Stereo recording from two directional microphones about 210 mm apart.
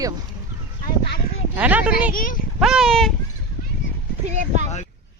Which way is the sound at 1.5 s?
10° right (ahead or behind).